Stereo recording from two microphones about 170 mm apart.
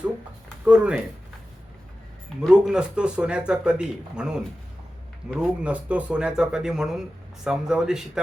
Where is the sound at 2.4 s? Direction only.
5° right (ahead or behind).